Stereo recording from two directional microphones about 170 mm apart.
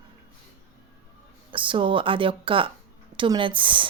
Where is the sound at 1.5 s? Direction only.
30° right (ahead or behind).